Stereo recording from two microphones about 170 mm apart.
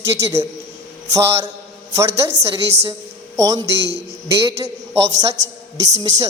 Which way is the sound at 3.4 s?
20° right (ahead or behind).